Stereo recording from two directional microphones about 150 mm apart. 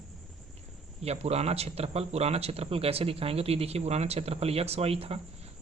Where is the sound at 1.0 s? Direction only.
45° right (ahead or behind).